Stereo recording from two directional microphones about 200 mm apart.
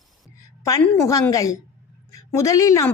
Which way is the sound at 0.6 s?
15° left (ahead or behind).